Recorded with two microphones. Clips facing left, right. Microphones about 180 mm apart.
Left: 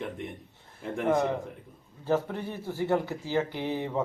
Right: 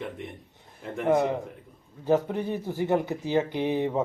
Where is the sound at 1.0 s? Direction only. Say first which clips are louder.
Right 3 dB; 20° right (ahead or behind).